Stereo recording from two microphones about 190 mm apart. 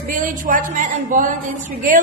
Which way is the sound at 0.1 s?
45° right (ahead or behind).